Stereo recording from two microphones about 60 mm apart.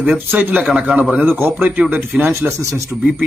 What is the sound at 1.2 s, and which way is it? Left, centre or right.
Speech, right.